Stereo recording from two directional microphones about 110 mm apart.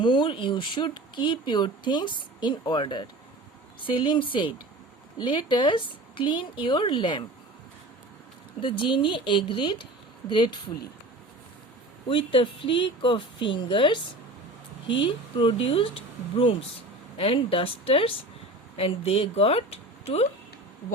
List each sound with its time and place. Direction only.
0.0 s speech: 45° left (ahead or behind)
8.6 s speech: 50° left (ahead or behind)
12.0 s speech: 50° left (ahead or behind)
15.0 s speech: 50° left (ahead or behind)